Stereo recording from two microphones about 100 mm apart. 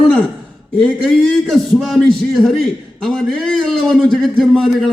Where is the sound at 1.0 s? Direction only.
Centre (ahead or behind).